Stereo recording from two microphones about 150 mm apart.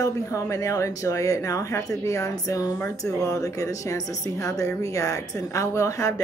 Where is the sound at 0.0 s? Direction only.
20° left (ahead or behind).